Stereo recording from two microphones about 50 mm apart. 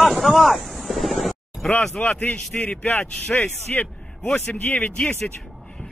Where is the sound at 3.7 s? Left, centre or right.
Left.